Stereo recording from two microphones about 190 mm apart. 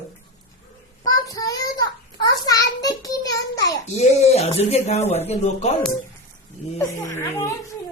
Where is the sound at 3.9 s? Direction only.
35° left (ahead or behind).